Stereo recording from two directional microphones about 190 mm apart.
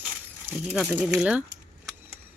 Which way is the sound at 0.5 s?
Centre (ahead or behind).